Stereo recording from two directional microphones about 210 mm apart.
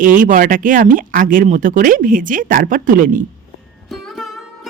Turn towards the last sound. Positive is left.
turn(degrees=0)  # may be behind; listen again after turning